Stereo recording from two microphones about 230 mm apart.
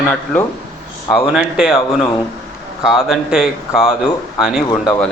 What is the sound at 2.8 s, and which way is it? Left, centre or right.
Speech, centre.